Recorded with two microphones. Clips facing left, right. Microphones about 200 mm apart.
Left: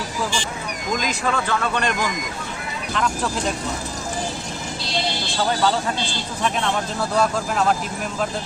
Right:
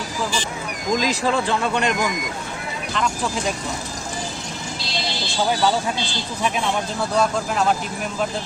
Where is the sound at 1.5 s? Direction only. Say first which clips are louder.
Right 1 dB; 20° right (ahead or behind).